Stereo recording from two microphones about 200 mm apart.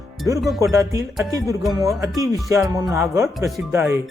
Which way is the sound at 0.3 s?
15° right (ahead or behind).